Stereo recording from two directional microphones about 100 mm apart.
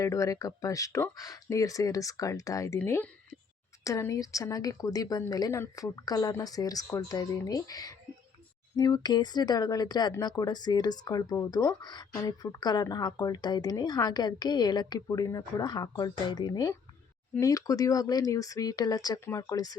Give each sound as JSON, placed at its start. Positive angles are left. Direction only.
{"t": 0.0, "sound": "speech", "side_deg": 30}